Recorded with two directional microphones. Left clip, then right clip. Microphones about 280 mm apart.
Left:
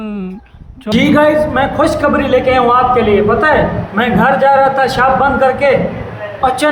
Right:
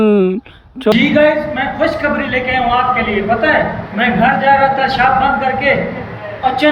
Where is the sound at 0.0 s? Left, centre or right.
Centre.